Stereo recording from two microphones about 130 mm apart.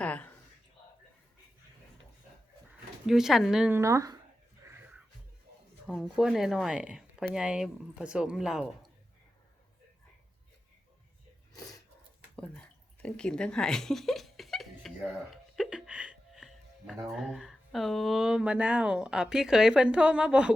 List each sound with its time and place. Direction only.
0.0 s a sound: 10° left (ahead or behind)
3.1 s speech: 5° right (ahead or behind)
3.7 s speech: 20° right (ahead or behind)
4.6 s music: 20° right (ahead or behind)
5.8 s speech: 5° right (ahead or behind)
11.5 s a sound: 30° left (ahead or behind)
12.4 s speech: 10° left (ahead or behind); by 20.5 s 10° right (ahead or behind)